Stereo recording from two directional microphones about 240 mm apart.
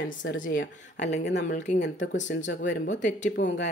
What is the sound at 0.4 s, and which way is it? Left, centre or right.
Speech, left.